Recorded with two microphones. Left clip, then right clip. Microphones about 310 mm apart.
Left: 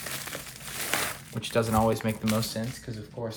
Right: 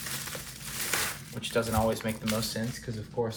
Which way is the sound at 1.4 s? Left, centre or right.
Left.